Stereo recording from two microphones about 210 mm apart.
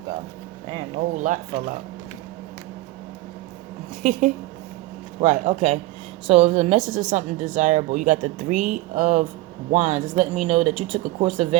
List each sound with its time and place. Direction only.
1.1 s speech: 35° right (ahead or behind)
4.0 s speech: 40° right (ahead or behind)